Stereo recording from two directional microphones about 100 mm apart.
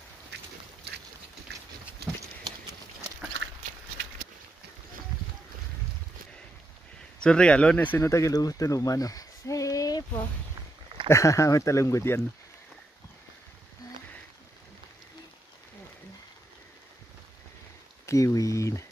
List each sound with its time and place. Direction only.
7.2 s speech: 10° left (ahead or behind)
8.0 s speech: 30° left (ahead or behind)
18.0 s speech: 35° left (ahead or behind)